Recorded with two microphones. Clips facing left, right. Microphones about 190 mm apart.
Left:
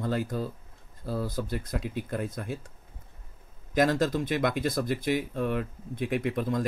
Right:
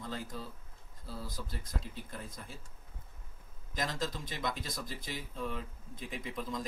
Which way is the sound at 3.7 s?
70° left (ahead or behind).